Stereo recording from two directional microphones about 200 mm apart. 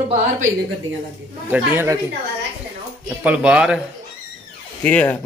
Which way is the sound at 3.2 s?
5° right (ahead or behind).